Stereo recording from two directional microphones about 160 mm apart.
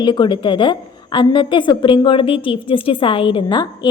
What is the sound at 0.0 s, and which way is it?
A woman's voice, 30° left (ahead or behind).